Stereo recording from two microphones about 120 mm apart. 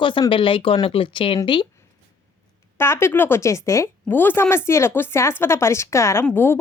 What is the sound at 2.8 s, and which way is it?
Speech, 20° left (ahead or behind).